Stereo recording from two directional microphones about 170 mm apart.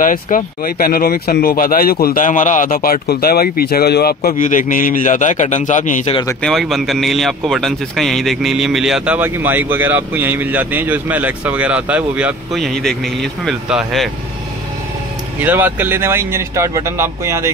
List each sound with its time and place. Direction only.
0.0 s speech: 55° left (ahead or behind)
6.4 s speech: centre (ahead or behind)
15.4 s speech: 10° right (ahead or behind)